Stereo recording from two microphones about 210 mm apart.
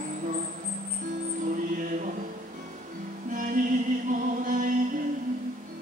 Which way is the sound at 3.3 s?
40° right (ahead or behind).